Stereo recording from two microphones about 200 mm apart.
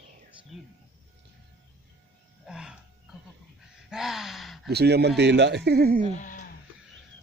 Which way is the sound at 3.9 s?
Centre (ahead or behind).